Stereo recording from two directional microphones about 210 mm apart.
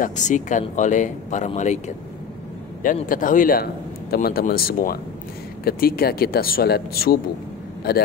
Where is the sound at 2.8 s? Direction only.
40° left (ahead or behind).